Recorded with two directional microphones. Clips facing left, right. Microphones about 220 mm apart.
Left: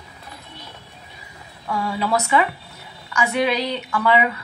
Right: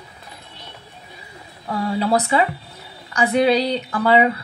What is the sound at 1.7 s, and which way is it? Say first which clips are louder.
A woman's voice: right 3 dB; 35° right (ahead or behind).